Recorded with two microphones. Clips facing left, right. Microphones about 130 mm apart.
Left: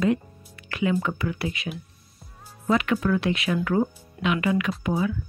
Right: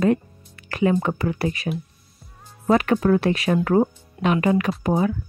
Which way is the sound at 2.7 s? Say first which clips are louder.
Right 5 dB; 40° right (ahead or behind).